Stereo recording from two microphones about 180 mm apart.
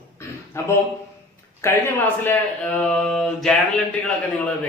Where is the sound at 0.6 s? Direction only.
15° left (ahead or behind).